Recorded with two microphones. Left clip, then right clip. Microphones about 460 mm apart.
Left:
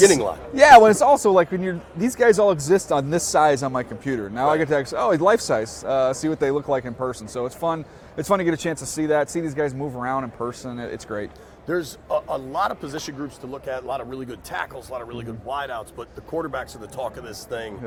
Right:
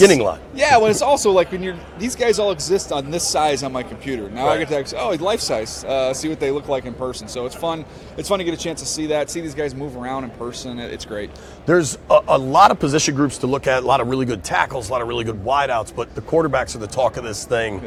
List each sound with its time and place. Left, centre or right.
0.5 s speech: left
11.6 s a man's voice: right